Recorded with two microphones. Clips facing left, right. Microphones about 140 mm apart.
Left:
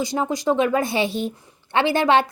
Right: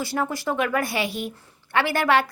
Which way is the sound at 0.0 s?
20° left (ahead or behind).